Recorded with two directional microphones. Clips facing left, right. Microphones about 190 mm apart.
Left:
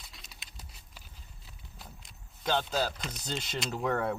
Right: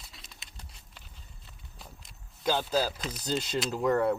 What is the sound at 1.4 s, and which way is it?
Speech, centre (ahead or behind).